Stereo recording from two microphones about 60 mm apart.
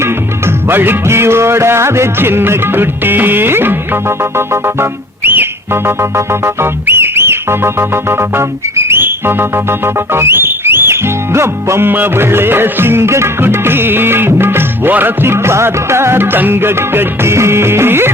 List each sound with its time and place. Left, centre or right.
0.0 s music: right
11.9 s music: right